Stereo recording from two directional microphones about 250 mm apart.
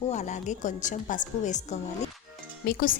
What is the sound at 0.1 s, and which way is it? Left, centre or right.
A woman's voice, left.